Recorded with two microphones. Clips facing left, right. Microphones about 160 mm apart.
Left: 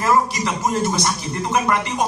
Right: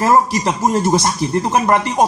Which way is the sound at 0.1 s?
45° right (ahead or behind).